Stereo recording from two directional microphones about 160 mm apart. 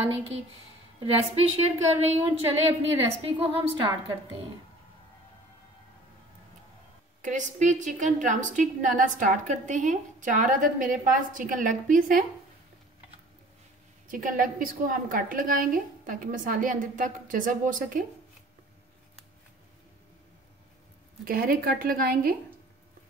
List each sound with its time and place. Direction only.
1.0 s a woman's voice: 40° right (ahead or behind)
7.2 s a woman's voice: 50° right (ahead or behind)
14.1 s a woman's voice: 60° right (ahead or behind)
21.2 s a woman's voice: 65° right (ahead or behind)